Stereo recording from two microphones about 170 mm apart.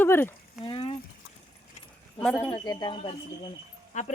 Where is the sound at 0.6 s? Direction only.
30° left (ahead or behind).